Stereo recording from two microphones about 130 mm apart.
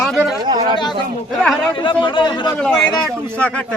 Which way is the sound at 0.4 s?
35° right (ahead or behind).